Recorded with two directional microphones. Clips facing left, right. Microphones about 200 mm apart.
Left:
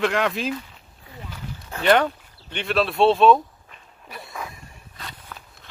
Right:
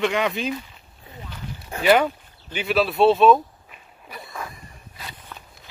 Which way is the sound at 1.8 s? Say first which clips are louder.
Right 1 dB; 5° right (ahead or behind).